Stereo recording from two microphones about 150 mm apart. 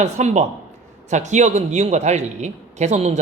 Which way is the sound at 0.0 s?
50° right (ahead or behind).